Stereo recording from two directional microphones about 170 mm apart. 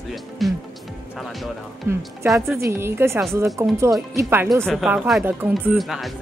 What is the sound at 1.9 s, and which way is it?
A woman's voice, 15° right (ahead or behind).